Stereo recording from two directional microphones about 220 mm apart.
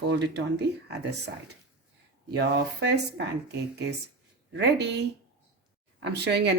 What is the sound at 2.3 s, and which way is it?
A woman's voice, 55° right (ahead or behind).